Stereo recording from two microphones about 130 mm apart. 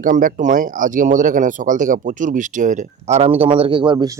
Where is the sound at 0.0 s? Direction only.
90° right; by 3.2 s 65° right (ahead or behind).